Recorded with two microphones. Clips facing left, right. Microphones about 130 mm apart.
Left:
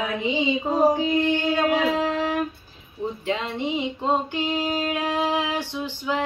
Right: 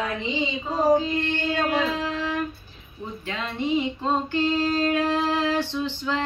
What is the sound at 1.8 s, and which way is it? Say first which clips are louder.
Music: left 4 dB; 65° left (ahead or behind).